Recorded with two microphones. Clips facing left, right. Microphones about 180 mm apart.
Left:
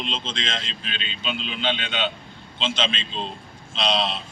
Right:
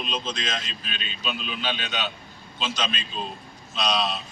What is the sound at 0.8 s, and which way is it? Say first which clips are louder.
Speech: left 2 dB; 70° left (ahead or behind).